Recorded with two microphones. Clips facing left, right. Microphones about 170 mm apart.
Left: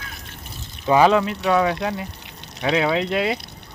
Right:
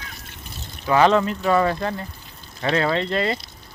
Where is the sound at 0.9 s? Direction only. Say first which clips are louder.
Left 1 dB; 10° left (ahead or behind).